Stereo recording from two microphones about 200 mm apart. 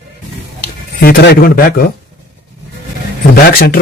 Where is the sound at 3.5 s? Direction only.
45° left (ahead or behind).